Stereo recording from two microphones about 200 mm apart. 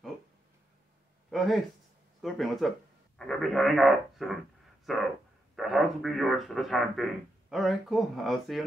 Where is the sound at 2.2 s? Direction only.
Centre (ahead or behind).